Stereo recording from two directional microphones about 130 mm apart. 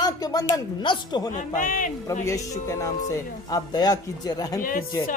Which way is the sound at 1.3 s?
90° left.